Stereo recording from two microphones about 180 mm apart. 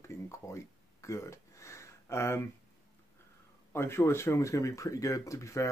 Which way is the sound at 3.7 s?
15° left (ahead or behind).